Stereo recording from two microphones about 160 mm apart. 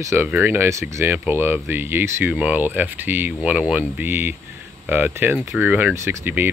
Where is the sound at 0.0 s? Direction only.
15° right (ahead or behind).